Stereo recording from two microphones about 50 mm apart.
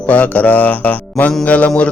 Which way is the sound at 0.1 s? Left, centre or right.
Left.